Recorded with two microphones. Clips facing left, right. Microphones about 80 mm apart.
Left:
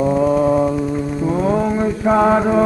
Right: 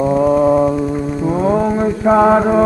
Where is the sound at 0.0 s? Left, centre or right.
Right.